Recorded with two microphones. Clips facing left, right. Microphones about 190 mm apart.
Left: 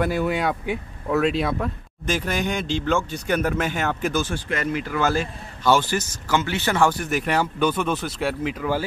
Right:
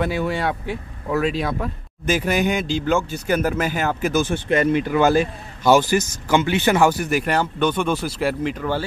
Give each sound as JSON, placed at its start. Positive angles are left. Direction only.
{"t": 0.0, "sound": "speech", "side_deg": 0}
{"t": 4.2, "sound": "a man's voice", "side_deg": -20}